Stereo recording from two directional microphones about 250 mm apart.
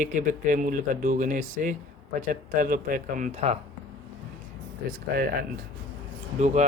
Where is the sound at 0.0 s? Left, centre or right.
Right.